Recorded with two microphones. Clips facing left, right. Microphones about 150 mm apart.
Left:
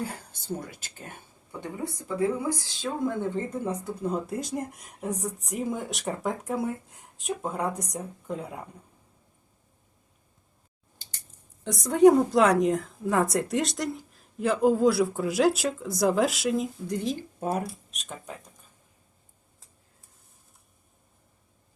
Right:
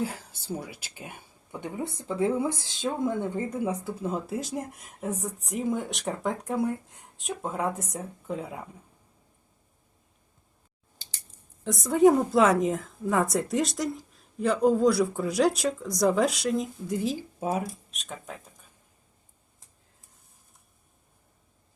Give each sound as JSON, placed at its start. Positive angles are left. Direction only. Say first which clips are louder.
{"t": 0.0, "sound": "speech", "louder": "right 3 dB", "side_deg": -5}
{"t": 1.6, "sound": "speech", "louder": "right 1 dB", "side_deg": -20}
{"t": 10.9, "sound": "scissors", "louder": "even", "side_deg": -90}
{"t": 11.6, "sound": "speech", "louder": "left 2 dB", "side_deg": 0}